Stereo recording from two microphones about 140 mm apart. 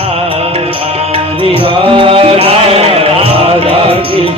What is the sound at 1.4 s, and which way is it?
Music, 40° right (ahead or behind).